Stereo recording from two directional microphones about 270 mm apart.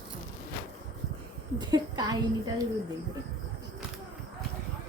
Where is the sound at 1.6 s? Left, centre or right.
Centre.